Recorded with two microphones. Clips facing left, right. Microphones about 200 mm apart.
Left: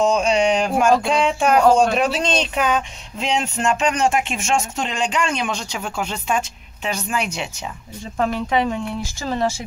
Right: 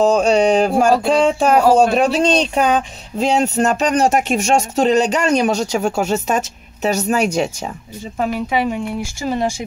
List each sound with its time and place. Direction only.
0.0 s speech: 35° right (ahead or behind)
8.2 s speech: 10° right (ahead or behind)